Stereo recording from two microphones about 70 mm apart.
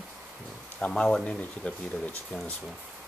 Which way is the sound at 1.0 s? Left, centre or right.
Centre.